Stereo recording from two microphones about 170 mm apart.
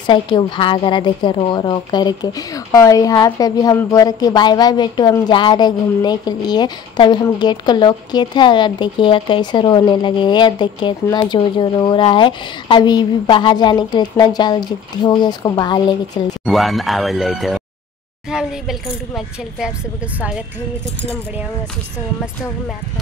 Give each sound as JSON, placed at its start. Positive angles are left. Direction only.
{"t": 0.0, "sound": "a woman's voice", "side_deg": 30}
{"t": 16.4, "sound": "speech", "side_deg": 0}